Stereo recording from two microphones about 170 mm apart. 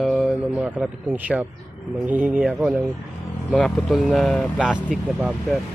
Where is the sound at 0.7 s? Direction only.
10° right (ahead or behind).